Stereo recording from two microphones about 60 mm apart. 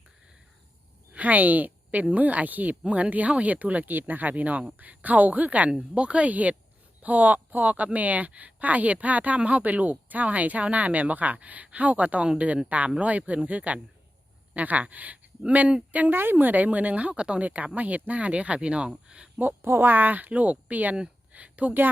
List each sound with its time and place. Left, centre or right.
1.1 s speech: right
19.6 s speech: right